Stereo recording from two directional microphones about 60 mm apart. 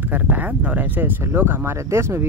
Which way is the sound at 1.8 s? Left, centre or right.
Right.